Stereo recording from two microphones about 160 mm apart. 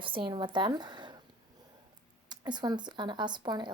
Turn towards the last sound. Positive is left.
turn(degrees=-25)  # may be behind; listen again after turning